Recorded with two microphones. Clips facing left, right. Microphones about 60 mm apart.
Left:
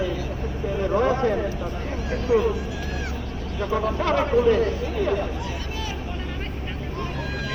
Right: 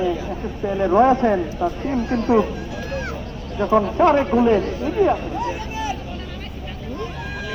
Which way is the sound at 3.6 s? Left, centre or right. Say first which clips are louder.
Right 8 dB; right.